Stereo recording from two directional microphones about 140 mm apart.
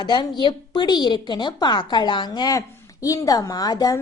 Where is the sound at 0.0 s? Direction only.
30° left (ahead or behind).